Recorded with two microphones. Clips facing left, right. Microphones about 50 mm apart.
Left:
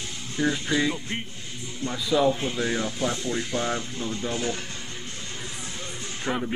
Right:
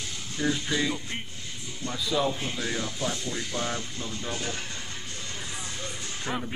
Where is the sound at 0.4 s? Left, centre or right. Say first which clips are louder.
Left 3 dB; centre.